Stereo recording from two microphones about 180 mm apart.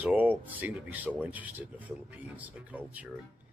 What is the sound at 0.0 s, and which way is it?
Speech, 10° right (ahead or behind).